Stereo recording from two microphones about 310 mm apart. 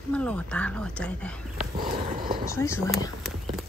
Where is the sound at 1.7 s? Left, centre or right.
Right.